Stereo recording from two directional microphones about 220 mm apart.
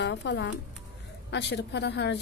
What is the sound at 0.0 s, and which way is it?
A woman's voice, 55° left (ahead or behind).